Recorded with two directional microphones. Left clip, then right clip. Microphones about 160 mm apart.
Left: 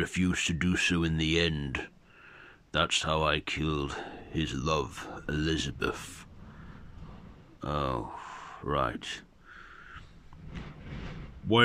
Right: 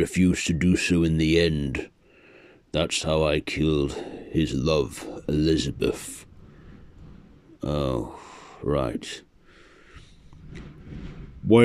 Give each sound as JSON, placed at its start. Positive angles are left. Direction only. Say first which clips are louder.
{"t": 0.0, "sound": "speech", "louder": "right 6 dB", "side_deg": -25}
{"t": 7.6, "sound": "speech", "louder": "right 5 dB", "side_deg": -25}